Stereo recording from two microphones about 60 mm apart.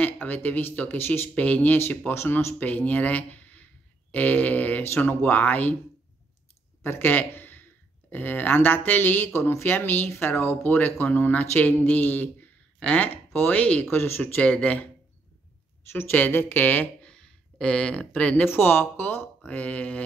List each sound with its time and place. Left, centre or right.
0.0 s speech: left
1.3 s speech: left
6.8 s speech: left
13.3 s speech: left
13.6 s speech: left
13.8 s speech: left
14.4 s speech: left
15.9 s speech: left
17.0 s a sound: centre
18.4 s speech: left